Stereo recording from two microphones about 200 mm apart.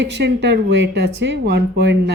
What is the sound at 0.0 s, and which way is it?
A woman's voice, 60° right (ahead or behind).